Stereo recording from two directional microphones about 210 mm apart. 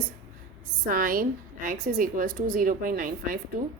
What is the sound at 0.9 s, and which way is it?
A woman's voice, 40° right (ahead or behind).